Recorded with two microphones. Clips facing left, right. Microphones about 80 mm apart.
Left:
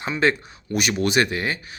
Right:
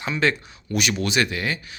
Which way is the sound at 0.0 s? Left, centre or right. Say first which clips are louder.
Left 2 dB; left.